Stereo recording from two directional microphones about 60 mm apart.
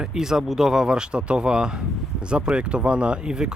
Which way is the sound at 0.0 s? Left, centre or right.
Centre.